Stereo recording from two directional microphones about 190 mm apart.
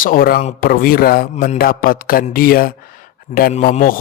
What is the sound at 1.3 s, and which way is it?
Speech, 35° left (ahead or behind).